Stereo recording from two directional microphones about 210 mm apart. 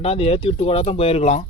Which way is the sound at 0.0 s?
30° left (ahead or behind).